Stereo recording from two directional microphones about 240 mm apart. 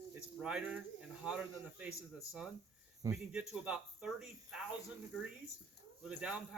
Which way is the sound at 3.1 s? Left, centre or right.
Centre.